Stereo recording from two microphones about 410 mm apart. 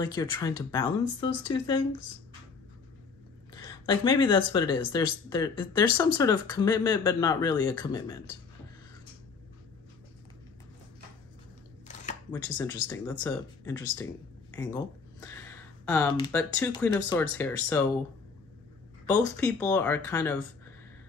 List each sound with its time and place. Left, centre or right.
0.0 s speech: centre
3.6 s speech: centre
11.9 s a sound: centre
12.8 s speech: centre
19.0 s speech: centre